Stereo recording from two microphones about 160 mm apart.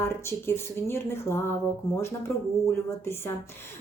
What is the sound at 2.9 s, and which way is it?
Speech, 15° left (ahead or behind).